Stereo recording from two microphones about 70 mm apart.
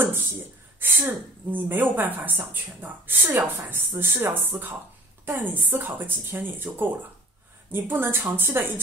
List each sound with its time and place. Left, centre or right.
0.0 s a woman's voice: right